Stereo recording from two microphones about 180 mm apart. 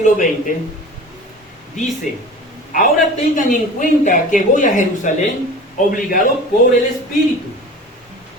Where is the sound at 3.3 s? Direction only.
45° left (ahead or behind).